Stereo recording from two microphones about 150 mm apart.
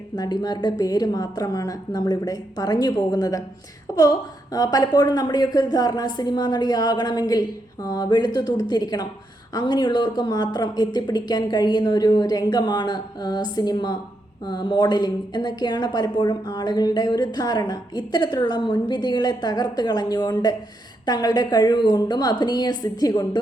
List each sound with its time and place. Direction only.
0.2 s a woman's voice: 25° left (ahead or behind)